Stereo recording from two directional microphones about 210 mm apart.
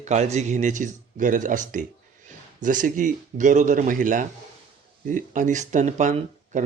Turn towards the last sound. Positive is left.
turn(degrees=-35)  # may be behind; listen again after turning